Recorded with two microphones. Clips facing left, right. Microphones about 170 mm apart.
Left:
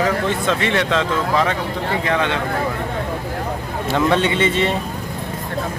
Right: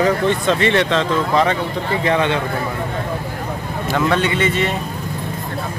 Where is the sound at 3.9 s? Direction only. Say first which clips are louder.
Left 1 dB; 25° left (ahead or behind).